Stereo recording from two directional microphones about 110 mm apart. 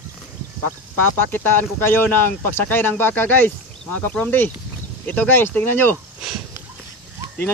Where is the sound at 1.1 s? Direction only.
15° left (ahead or behind).